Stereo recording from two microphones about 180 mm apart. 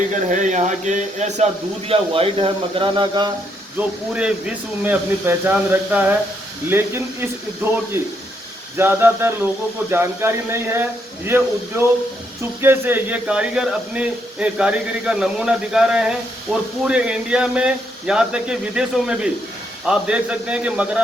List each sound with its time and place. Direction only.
0.1 s speech: 45° right (ahead or behind); by 3.3 s 25° right (ahead or behind)
3.8 s speech: 5° right (ahead or behind)
12.6 s speech: 10° right (ahead or behind)